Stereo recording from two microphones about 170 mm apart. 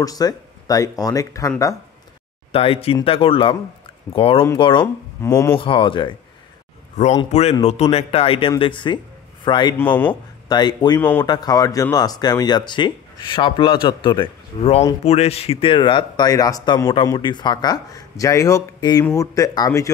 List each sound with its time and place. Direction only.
0.0 s speech: 20° left (ahead or behind)
2.5 s speech: 35° left (ahead or behind)
5.2 s speech: 15° left (ahead or behind)
5.6 s speech: 30° left (ahead or behind)
7.0 s speech: 45° left (ahead or behind); by 11.0 s 25° left (ahead or behind)
11.0 s speech: 10° left (ahead or behind)
11.2 s speech: 25° left (ahead or behind)